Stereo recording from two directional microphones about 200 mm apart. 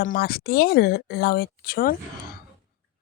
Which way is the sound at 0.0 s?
50° left (ahead or behind).